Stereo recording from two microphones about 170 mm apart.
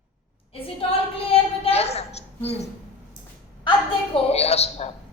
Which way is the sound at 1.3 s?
35° left (ahead or behind).